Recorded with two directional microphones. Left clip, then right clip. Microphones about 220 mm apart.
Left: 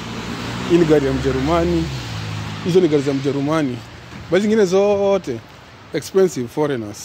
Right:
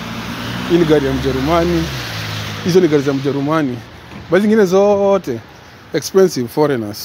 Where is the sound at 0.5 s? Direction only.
45° right (ahead or behind).